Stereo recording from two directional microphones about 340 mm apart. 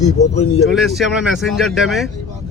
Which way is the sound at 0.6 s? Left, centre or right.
Centre.